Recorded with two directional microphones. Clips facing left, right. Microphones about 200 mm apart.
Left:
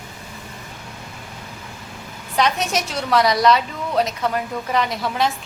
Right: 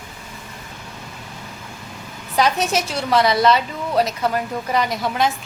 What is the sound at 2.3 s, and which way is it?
A woman's voice, centre (ahead or behind).